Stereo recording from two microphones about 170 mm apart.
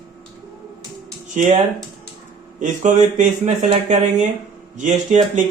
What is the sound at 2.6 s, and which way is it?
Speech, 45° right (ahead or behind).